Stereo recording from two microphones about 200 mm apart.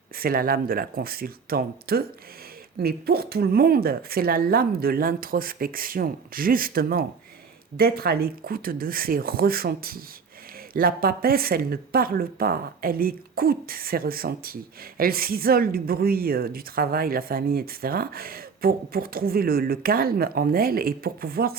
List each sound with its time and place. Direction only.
0.2 s speech: 45° right (ahead or behind)